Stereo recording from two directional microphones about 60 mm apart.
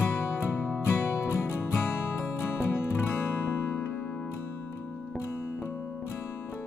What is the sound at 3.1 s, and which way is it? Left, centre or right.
Music, left.